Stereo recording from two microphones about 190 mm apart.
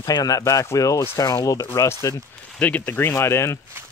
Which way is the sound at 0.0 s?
20° left (ahead or behind).